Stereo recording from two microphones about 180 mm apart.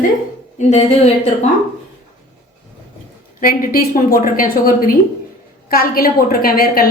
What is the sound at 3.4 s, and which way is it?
A woman's voice, 55° left (ahead or behind).